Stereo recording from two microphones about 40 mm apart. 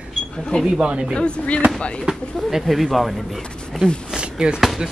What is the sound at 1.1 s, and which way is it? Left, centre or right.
Speech, left.